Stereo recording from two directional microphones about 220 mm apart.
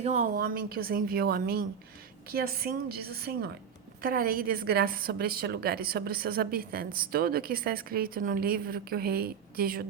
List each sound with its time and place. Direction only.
0.0 s a woman's voice: 30° right (ahead or behind)
0.3 s a woman's voice: 40° right (ahead or behind)